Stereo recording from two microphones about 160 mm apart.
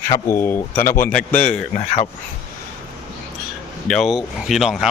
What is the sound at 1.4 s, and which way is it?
Speech, 55° left (ahead or behind).